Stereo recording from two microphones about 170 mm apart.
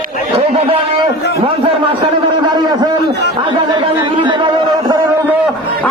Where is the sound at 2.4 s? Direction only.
25° right (ahead or behind).